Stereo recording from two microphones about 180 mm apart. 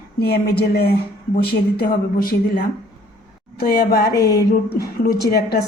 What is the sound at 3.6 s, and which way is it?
Speech, 60° left (ahead or behind).